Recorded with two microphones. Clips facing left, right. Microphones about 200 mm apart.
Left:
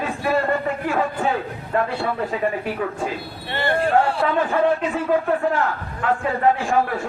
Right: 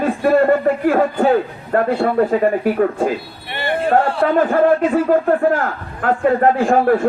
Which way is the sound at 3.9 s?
50° right (ahead or behind).